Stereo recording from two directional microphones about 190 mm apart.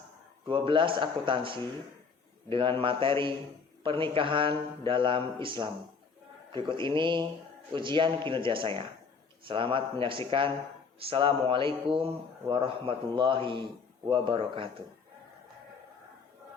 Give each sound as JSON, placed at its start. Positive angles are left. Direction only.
{"t": 0.4, "sound": "a man's voice", "side_deg": -25}